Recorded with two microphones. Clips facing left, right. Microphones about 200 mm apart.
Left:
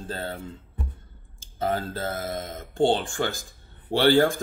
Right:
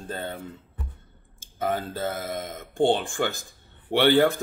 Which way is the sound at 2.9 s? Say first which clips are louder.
Even; 15° right (ahead or behind).